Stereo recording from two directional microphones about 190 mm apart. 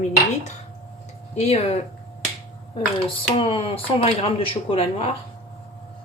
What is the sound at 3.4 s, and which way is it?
Speech, 30° left (ahead or behind).